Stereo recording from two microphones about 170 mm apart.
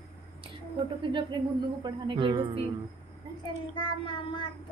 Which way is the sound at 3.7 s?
30° left (ahead or behind).